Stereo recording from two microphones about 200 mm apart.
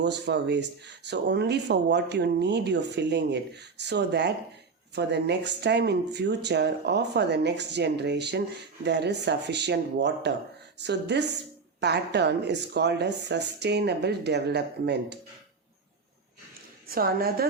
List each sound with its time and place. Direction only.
0.0 s speech: 60° right (ahead or behind)
16.9 s a woman's voice: 50° right (ahead or behind)